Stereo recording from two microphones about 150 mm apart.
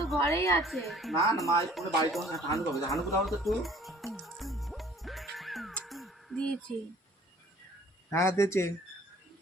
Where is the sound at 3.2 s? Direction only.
Centre (ahead or behind).